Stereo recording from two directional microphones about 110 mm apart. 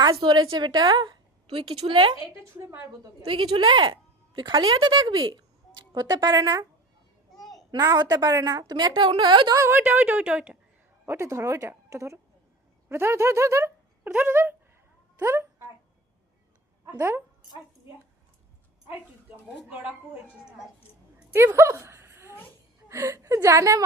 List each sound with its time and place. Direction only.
0.0 s a woman's voice: 45° right (ahead or behind)
2.4 s speech: 25° right (ahead or behind)
3.2 s a woman's voice: 55° right (ahead or behind); by 6.7 s 35° right (ahead or behind)
7.3 s a sound: centre (ahead or behind)
7.7 s a woman's voice: 40° right (ahead or behind)
9.6 s speech: 20° right (ahead or behind)
11.0 s speech: 20° right (ahead or behind)
14.1 s speech: 15° right (ahead or behind)
15.2 s a sound: 25° right (ahead or behind)
16.8 s speech: 25° right (ahead or behind)
21.3 s a sound: 25° right (ahead or behind)
22.9 s speech: 25° right (ahead or behind)